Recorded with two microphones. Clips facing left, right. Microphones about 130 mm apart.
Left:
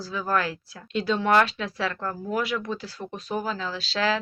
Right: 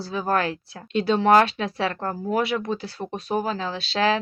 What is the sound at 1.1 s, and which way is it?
Speech, 40° right (ahead or behind).